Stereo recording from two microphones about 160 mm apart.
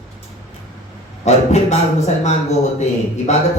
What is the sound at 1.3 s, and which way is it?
A man's voice, 45° left (ahead or behind).